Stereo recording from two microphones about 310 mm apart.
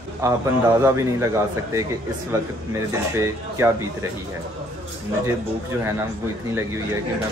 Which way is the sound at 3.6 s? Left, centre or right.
Centre.